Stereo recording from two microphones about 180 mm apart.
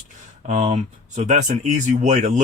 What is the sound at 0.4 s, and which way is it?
Speech, 40° right (ahead or behind).